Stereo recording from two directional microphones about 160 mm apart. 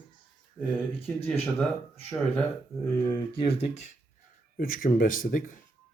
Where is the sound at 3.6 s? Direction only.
45° left (ahead or behind).